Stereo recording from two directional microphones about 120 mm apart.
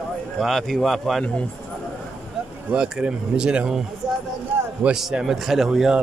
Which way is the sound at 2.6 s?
5° right (ahead or behind).